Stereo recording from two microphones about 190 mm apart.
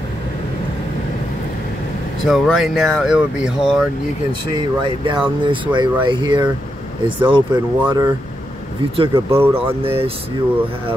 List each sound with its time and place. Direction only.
2.2 s speech: centre (ahead or behind)
4.3 s speech: 25° right (ahead or behind)
9.3 s speech: 10° right (ahead or behind)
9.8 s speech: 30° right (ahead or behind)